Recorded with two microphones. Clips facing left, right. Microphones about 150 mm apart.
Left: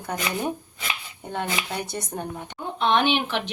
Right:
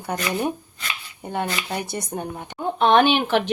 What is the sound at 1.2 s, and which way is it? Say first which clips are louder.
Speech: right 3 dB; 10° right (ahead or behind).